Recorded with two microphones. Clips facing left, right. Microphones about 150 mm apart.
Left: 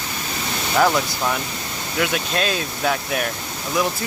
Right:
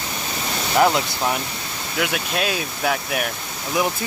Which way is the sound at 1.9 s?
5° right (ahead or behind).